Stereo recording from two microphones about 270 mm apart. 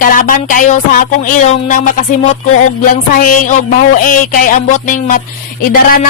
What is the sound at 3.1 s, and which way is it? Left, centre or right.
Music, left.